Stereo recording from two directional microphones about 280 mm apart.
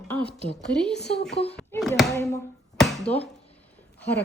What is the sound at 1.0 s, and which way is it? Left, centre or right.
Speech, left.